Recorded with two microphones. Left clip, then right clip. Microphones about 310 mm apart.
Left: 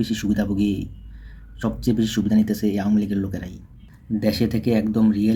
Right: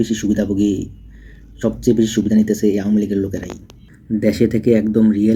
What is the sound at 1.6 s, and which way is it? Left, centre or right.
Speech, centre.